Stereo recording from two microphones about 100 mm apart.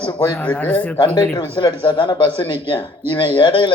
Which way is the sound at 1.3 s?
50° left (ahead or behind).